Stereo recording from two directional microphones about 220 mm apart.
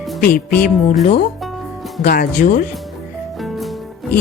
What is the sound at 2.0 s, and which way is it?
Speech, 40° left (ahead or behind).